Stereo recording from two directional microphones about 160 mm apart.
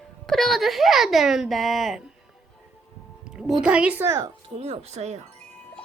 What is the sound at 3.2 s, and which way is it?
Music, 5° right (ahead or behind).